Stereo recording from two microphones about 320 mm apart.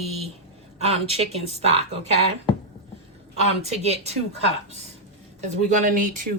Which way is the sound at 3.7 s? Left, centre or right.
Centre.